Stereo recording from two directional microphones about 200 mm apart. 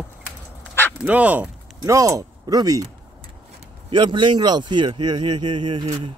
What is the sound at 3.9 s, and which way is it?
Speech, 25° right (ahead or behind).